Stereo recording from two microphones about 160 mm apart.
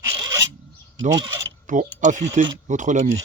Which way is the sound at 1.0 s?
25° right (ahead or behind).